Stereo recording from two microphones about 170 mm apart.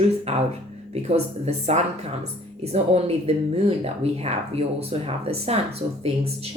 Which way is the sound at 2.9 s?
35° right (ahead or behind).